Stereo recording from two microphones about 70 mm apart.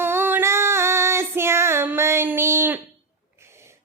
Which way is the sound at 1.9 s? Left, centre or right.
Right.